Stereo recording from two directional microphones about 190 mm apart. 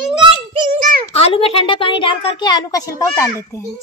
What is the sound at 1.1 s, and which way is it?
A woman's voice, 30° left (ahead or behind).